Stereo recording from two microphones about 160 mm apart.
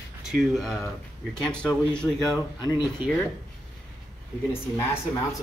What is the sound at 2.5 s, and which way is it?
Speech, 30° left (ahead or behind).